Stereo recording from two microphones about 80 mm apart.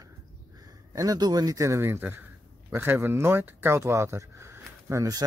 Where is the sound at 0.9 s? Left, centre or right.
Right.